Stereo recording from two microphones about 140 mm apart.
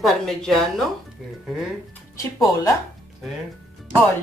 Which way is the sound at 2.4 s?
25° left (ahead or behind).